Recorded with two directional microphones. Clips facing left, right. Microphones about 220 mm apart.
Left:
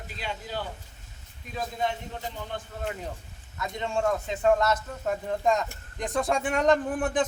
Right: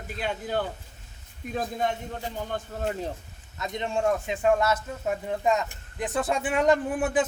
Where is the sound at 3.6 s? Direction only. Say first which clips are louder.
Right 1 dB; 20° right (ahead or behind).